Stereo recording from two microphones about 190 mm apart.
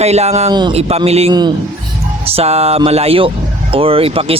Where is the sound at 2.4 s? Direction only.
35° right (ahead or behind).